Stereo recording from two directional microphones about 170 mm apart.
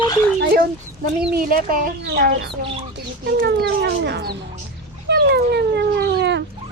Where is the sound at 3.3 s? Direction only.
75° right (ahead or behind).